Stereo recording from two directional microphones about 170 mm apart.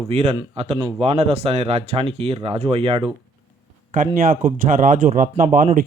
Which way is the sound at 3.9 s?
55° right (ahead or behind).